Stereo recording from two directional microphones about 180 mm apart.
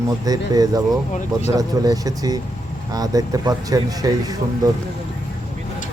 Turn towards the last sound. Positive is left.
turn(degrees=-20)  # may be behind; listen again after turning